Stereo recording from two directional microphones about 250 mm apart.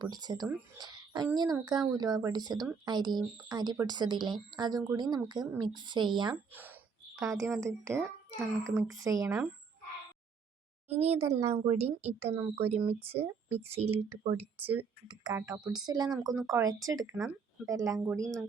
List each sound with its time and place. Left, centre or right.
0.0 s speech: centre
6.5 s speech: centre
10.8 s speech: right
13.9 s speech: centre
14.3 s speech: right
14.6 s speech: centre
15.0 s speech: centre